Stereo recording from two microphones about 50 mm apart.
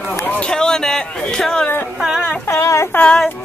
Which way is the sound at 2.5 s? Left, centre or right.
Left.